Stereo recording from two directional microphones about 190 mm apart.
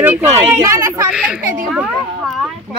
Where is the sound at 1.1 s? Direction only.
5° right (ahead or behind).